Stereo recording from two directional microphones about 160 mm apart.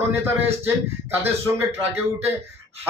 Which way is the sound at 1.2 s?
15° right (ahead or behind).